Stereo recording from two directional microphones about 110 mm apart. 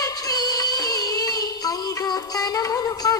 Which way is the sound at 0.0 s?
35° left (ahead or behind).